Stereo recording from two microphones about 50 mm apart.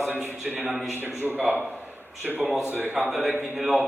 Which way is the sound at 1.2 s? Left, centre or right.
Right.